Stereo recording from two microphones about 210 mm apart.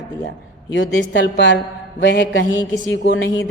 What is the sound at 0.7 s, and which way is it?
A woman's voice, 60° left (ahead or behind).